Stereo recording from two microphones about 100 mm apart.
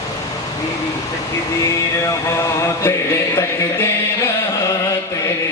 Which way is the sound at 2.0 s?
30° left (ahead or behind).